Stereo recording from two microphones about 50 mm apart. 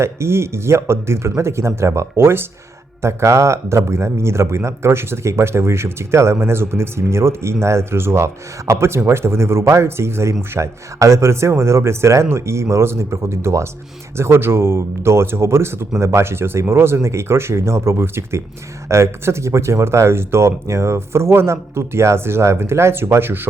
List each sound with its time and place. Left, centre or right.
0.0 s speech: right
3.0 s speech: right
10.5 s speech: right